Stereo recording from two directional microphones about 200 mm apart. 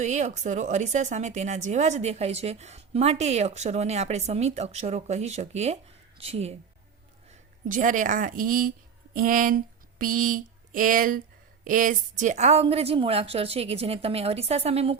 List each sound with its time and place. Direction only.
0.0 s speech: 35° right (ahead or behind)
7.7 s speech: 40° right (ahead or behind)
10.0 s a sound: 45° right (ahead or behind)
11.6 s a woman's voice: 40° right (ahead or behind)